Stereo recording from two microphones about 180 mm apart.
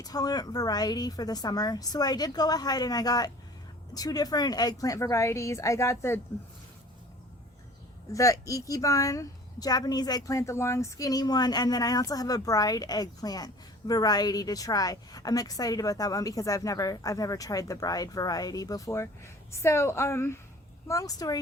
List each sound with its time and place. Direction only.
0.0 s a woman's voice: 20° left (ahead or behind)
8.1 s speech: 20° left (ahead or behind)